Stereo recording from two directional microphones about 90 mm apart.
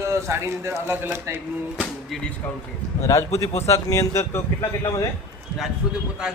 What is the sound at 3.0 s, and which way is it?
Speech, 35° left (ahead or behind).